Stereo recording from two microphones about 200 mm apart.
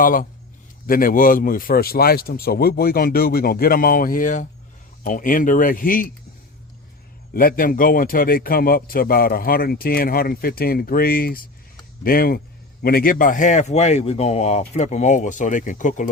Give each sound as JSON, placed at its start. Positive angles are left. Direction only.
{"t": 0.0, "sound": "a man's voice", "side_deg": 45}
{"t": 7.3, "sound": "a man's voice", "side_deg": 45}